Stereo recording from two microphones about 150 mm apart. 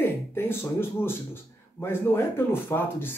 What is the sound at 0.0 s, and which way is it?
Speech, 15° left (ahead or behind).